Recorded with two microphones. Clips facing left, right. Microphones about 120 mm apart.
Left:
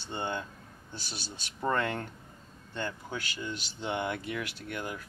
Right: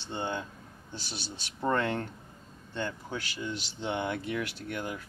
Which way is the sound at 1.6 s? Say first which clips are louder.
Right 1 dB; centre (ahead or behind).